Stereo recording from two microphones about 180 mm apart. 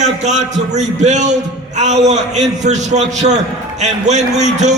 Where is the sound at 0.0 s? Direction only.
40° right (ahead or behind).